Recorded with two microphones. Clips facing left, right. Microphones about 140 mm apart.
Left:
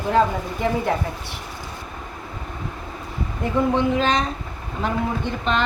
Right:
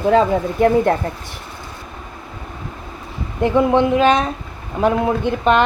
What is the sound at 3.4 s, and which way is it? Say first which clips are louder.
Speech: right 6 dB; 70° right (ahead or behind).